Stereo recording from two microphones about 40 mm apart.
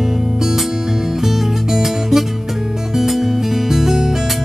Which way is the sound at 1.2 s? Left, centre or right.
Centre.